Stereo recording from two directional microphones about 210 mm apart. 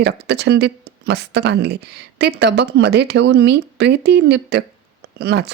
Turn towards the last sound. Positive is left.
turn(degrees=-50)  # may be behind; listen again after turning